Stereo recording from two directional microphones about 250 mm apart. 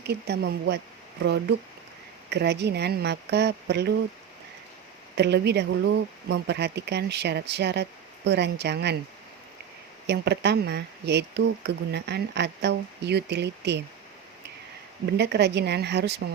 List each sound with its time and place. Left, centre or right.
0.0 s speech: right
5.1 s speech: right
10.1 s speech: right
15.2 s speech: right